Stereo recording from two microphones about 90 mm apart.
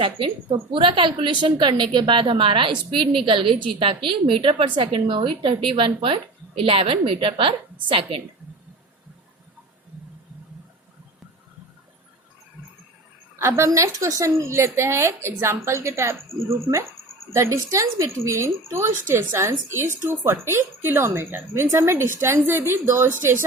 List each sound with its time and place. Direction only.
0.4 s a woman's voice: 65° right (ahead or behind)
6.6 s a woman's voice: 90° right; by 8.2 s 70° right (ahead or behind)
13.4 s a woman's voice: 35° right (ahead or behind)